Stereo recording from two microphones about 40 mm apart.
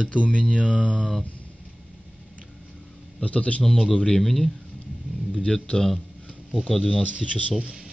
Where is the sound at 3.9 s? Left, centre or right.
Left.